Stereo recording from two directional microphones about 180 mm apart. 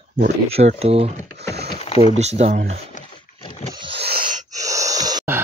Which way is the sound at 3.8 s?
30° right (ahead or behind).